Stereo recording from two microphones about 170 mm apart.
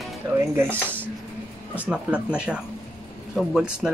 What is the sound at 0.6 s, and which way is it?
Speech, 10° right (ahead or behind).